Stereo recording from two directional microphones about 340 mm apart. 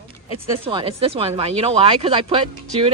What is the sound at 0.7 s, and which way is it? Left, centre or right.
Speech, centre.